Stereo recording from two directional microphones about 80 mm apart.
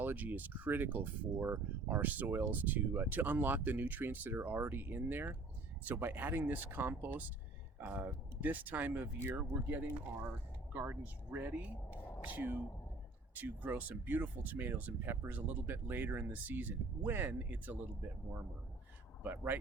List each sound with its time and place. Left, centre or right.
0.0 s speech: right
19.2 s speech: right